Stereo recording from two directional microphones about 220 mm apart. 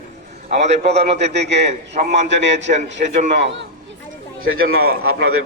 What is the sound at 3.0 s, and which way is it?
Speech, 40° right (ahead or behind).